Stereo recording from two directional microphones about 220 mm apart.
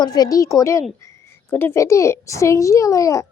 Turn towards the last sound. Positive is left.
turn(degrees=15)  # may be behind; listen again after turning